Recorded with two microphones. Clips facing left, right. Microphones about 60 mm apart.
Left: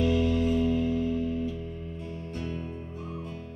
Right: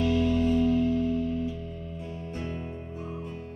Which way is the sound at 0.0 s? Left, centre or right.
Centre.